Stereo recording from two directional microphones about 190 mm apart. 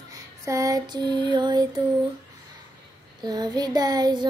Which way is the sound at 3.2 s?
20° right (ahead or behind).